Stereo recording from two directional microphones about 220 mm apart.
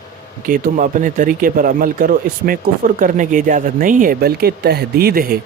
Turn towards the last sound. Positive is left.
turn(degrees=-40)  # may be behind; listen again after turning